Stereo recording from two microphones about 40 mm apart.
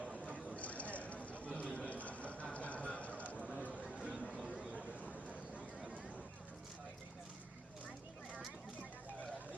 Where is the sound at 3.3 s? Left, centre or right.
Right.